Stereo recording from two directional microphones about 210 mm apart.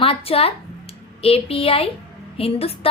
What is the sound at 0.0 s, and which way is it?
A woman's voice, 25° left (ahead or behind).